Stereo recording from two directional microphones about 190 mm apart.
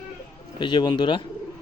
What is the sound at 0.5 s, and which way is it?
Speech, 25° left (ahead or behind).